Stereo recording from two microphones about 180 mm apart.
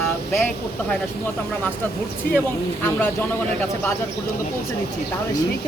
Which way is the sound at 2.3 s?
55° left (ahead or behind).